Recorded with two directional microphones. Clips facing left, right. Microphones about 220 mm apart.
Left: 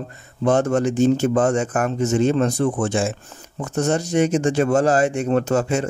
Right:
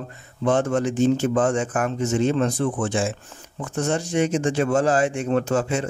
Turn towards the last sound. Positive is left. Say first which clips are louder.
# left 2 dB
turn(degrees=40)  # may be behind; listen again after turning